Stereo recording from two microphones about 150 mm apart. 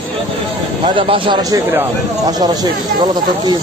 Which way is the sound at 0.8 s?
35° right (ahead or behind).